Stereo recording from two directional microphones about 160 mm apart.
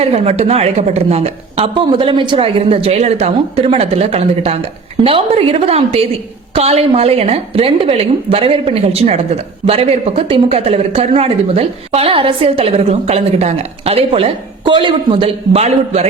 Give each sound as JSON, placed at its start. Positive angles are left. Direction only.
{"t": 0.0, "sound": "a woman's voice", "side_deg": -40}